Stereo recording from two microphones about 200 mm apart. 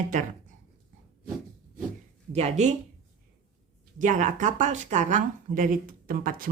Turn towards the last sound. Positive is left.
turn(degrees=-45)  # may be behind; listen again after turning